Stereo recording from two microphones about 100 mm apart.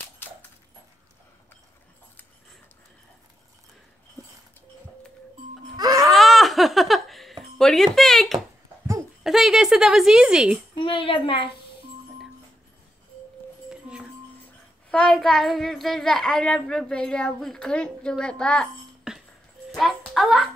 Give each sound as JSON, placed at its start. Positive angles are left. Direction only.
{"t": 5.8, "sound": "a sound", "side_deg": -40}
{"t": 6.0, "sound": "laughter", "side_deg": 0}
{"t": 7.5, "sound": "speech", "side_deg": 5}
{"t": 10.7, "sound": "a woman's voice", "side_deg": 55}
{"t": 13.7, "sound": "music", "side_deg": -10}
{"t": 14.9, "sound": "a child's voice", "side_deg": 5}
{"t": 19.1, "sound": "a sound", "side_deg": -10}
{"t": 20.2, "sound": "speech", "side_deg": -5}